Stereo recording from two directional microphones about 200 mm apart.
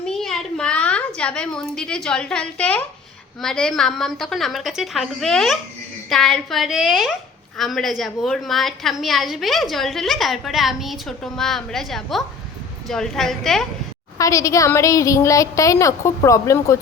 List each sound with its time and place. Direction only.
0.0 s a sound: centre (ahead or behind)
3.4 s a woman's voice: 5° left (ahead or behind)
14.2 s a woman's voice: 15° left (ahead or behind)